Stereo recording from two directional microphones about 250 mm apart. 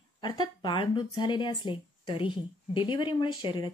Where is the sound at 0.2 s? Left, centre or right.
Centre.